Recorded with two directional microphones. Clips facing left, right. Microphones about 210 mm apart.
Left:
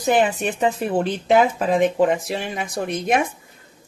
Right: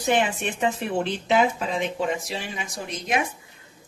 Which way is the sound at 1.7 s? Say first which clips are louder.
Left 9 dB; 50° left (ahead or behind).